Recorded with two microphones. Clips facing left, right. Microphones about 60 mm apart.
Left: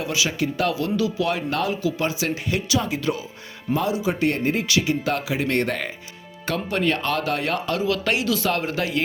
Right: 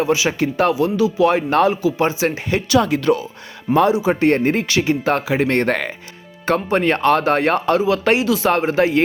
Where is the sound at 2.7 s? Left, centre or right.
Right.